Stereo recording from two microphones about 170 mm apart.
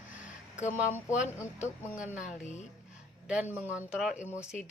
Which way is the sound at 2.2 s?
45° left (ahead or behind).